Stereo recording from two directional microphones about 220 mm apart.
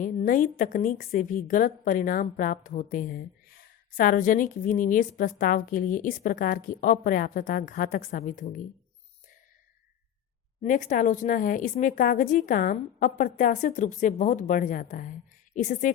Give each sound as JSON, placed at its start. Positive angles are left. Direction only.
{"t": 0.0, "sound": "a woman's voice", "side_deg": 35}
{"t": 10.6, "sound": "a woman's voice", "side_deg": 35}